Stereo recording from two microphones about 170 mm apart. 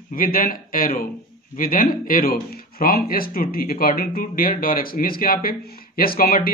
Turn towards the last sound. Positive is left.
turn(degrees=60)  # may be behind; listen again after turning